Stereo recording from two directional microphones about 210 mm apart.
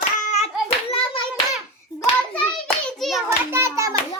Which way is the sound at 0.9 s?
25° left (ahead or behind).